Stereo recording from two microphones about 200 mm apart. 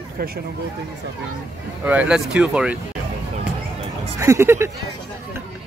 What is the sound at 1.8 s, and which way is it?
Speech, 5° right (ahead or behind).